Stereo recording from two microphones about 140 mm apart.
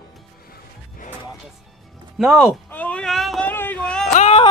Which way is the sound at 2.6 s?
10° left (ahead or behind).